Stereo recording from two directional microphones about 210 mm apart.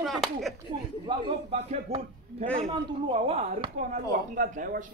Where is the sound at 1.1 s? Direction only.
25° right (ahead or behind).